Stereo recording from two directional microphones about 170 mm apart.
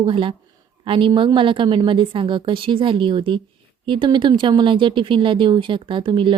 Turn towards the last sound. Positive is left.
turn(degrees=-30)  # may be behind; listen again after turning